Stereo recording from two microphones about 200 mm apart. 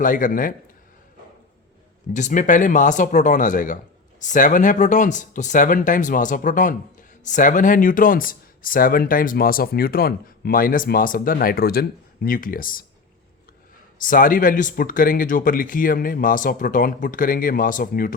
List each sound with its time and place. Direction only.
0.0 s speech: 40° left (ahead or behind)
2.1 s speech: 40° left (ahead or behind)
14.0 s speech: 45° left (ahead or behind)